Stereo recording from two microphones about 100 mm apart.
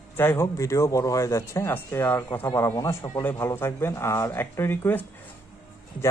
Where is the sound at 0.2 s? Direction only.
25° left (ahead or behind).